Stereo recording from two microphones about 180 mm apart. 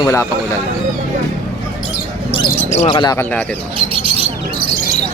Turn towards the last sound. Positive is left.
turn(degrees=-30)  # may be behind; listen again after turning